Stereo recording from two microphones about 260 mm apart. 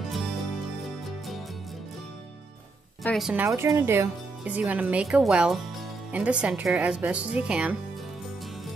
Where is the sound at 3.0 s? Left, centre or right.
Centre.